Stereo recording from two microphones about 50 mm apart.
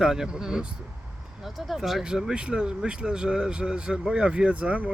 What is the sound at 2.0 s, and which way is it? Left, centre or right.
Speech, centre.